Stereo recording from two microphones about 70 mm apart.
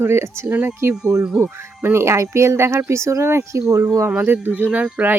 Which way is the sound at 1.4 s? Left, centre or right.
Right.